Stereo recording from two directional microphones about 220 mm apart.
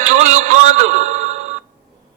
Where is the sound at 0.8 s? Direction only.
35° right (ahead or behind).